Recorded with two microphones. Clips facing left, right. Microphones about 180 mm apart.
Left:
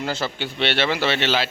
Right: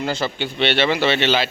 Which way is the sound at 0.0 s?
5° left (ahead or behind).